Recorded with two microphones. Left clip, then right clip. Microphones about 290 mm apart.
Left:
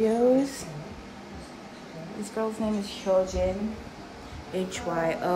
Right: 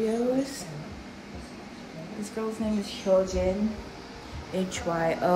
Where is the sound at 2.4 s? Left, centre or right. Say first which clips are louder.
Left 2 dB; centre.